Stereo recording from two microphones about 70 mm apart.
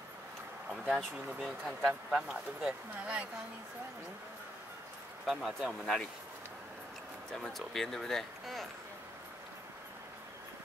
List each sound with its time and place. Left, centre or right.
0.7 s speech: centre
5.2 s speech: centre
7.3 s speech: centre